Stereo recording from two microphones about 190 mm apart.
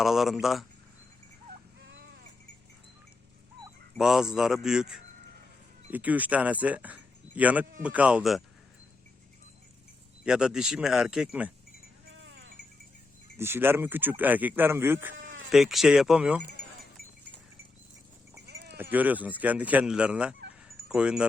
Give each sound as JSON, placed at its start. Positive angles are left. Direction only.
{"t": 0.0, "sound": "speech", "side_deg": 0}
{"t": 1.9, "sound": "sheep", "side_deg": -65}
{"t": 3.9, "sound": "speech", "side_deg": -5}
{"t": 10.2, "sound": "speech", "side_deg": -5}
{"t": 12.1, "sound": "a sound", "side_deg": -90}
{"t": 13.4, "sound": "speech", "side_deg": -10}
{"t": 15.4, "sound": "speech", "side_deg": 0}
{"t": 18.4, "sound": "sheep", "side_deg": -60}
{"t": 18.8, "sound": "speech", "side_deg": -10}
{"t": 20.7, "sound": "dog", "side_deg": -5}